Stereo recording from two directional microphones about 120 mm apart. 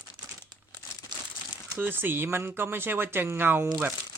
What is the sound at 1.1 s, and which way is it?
Crumpling, 40° right (ahead or behind).